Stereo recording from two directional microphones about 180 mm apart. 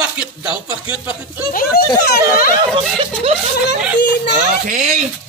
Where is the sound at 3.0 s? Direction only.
35° right (ahead or behind).